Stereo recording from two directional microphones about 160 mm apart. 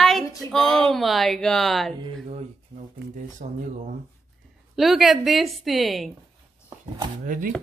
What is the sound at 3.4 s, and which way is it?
Speech, 55° right (ahead or behind).